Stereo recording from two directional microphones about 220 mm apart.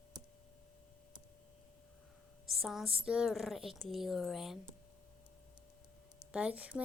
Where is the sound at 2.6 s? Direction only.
Centre (ahead or behind).